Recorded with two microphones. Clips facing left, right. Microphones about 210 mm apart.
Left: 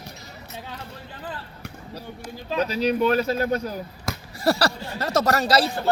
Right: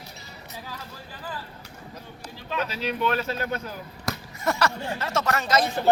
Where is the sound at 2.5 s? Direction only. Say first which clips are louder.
Left 6 dB; 40° left (ahead or behind).